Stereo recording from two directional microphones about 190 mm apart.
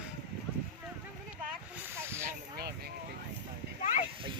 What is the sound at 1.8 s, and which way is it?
Snake, 15° right (ahead or behind).